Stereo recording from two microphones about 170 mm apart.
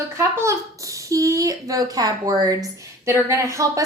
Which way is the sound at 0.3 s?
20° right (ahead or behind).